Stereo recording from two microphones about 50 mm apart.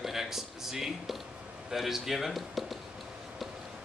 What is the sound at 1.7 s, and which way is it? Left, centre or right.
A man's voice, centre.